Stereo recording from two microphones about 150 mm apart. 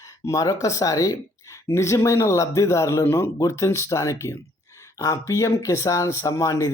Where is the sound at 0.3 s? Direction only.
20° left (ahead or behind).